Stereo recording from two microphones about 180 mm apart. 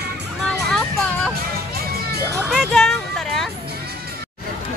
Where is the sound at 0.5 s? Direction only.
5° left (ahead or behind).